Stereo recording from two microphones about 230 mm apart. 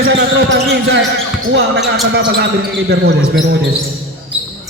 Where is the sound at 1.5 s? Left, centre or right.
Right.